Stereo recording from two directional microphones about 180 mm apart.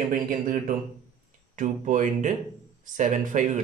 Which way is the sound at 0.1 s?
50° right (ahead or behind).